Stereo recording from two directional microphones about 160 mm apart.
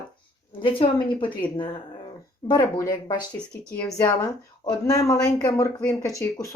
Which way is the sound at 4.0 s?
25° left (ahead or behind).